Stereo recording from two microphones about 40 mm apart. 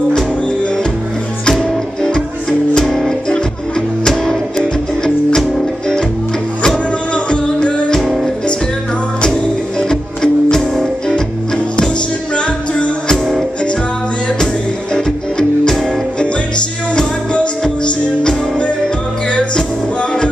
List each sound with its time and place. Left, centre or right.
1.5 s music: centre
6.6 s music: left
9.3 s music: centre
12.4 s music: left
15.0 s music: centre
19.3 s music: left